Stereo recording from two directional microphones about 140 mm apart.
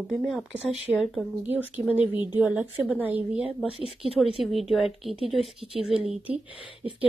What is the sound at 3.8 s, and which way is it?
Speech, 40° left (ahead or behind).